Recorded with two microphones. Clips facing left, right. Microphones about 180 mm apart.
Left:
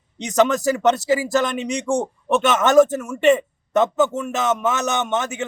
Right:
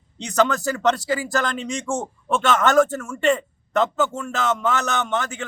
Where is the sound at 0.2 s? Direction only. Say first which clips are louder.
Left 3 dB; 20° left (ahead or behind).